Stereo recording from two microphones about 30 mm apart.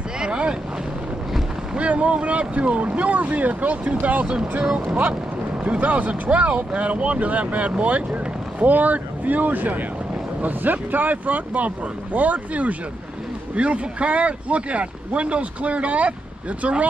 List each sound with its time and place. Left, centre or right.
0.2 s boat: right
1.8 s speech: right
13.6 s speech: right